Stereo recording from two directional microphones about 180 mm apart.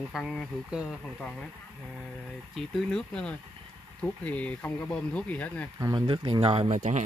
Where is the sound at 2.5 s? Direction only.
5° left (ahead or behind).